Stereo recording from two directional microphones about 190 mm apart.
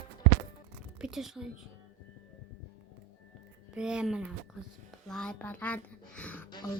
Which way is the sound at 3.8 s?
5° right (ahead or behind).